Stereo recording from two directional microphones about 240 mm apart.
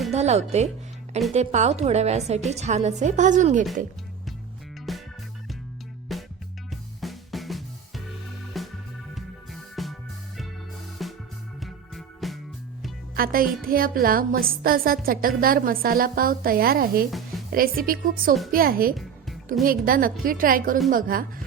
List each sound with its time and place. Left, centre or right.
0.1 s speech: right
4.9 s music: centre
6.1 s music: centre
11.0 s music: centre
13.1 s music: right
13.6 s a woman's voice: right
17.1 s a woman's voice: centre
17.5 s a woman's voice: right